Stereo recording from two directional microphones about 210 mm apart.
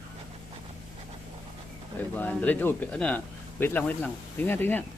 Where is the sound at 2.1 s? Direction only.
10° left (ahead or behind).